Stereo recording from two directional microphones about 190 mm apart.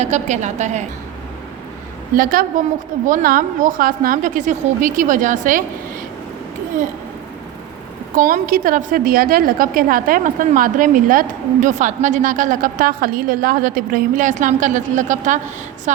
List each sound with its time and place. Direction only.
0.0 s a woman's voice: 40° right (ahead or behind)
2.1 s a woman's voice: 50° right (ahead or behind)
8.1 s a woman's voice: 45° right (ahead or behind)